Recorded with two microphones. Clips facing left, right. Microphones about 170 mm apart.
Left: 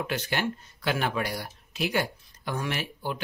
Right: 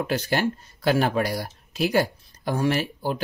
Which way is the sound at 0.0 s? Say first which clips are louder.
Right 5 dB; 35° right (ahead or behind).